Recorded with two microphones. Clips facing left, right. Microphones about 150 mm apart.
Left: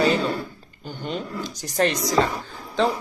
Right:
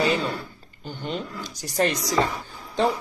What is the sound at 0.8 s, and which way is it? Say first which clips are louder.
Speech: left 1 dB; 45° left (ahead or behind).